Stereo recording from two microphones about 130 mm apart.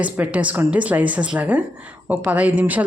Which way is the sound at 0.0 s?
10° right (ahead or behind).